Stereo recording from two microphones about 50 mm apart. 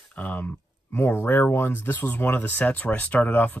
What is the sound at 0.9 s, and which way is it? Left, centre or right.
Speech, left.